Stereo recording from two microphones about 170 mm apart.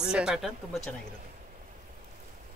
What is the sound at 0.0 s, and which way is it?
Speech, 5° right (ahead or behind).